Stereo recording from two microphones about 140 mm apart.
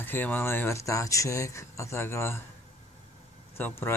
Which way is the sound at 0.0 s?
15° left (ahead or behind).